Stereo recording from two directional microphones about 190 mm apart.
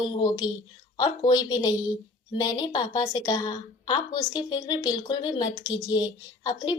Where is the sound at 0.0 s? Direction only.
20° left (ahead or behind).